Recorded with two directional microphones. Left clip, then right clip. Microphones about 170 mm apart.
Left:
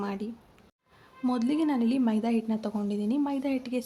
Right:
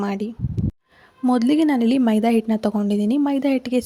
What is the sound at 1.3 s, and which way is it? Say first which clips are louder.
A woman's voice: right 10 dB; 40° right (ahead or behind).